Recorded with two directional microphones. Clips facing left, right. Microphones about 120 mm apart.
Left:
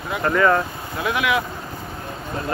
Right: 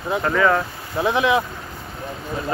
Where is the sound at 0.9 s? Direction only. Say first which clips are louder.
Right 3 dB; 30° right (ahead or behind).